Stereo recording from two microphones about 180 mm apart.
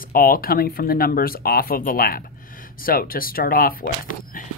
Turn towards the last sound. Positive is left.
turn(degrees=50)  # may be behind; listen again after turning